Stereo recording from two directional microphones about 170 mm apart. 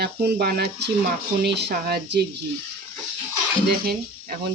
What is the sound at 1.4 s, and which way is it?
Speech, 80° right.